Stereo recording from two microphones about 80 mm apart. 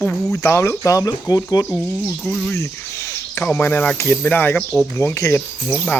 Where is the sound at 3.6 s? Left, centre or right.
Centre.